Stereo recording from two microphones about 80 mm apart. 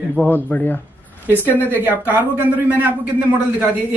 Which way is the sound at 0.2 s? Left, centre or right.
Centre.